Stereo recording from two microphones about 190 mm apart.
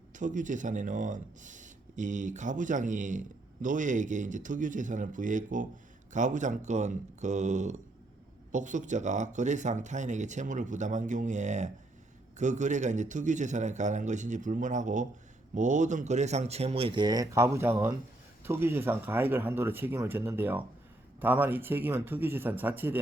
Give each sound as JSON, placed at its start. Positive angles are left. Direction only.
{"t": 0.1, "sound": "speech", "side_deg": -40}